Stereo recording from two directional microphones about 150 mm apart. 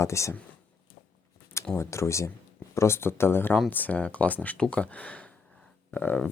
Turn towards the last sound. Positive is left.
turn(degrees=10)  # may be behind; listen again after turning